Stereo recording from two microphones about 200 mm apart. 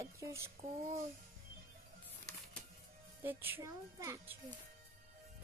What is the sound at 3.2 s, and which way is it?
A woman's voice, 10° right (ahead or behind).